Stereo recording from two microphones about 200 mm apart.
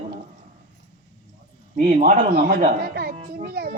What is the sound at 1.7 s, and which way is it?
A child's voice, 45° right (ahead or behind).